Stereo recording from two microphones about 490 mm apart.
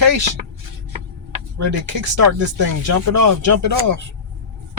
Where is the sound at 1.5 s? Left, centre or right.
Right.